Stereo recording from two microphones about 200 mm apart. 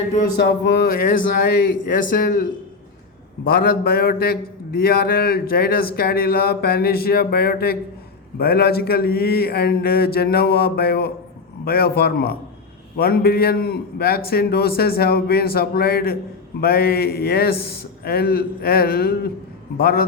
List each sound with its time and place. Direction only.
0.3 s speech: 60° left (ahead or behind)